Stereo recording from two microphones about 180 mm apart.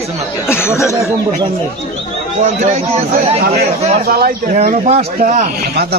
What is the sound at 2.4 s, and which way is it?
Speech, 40° right (ahead or behind).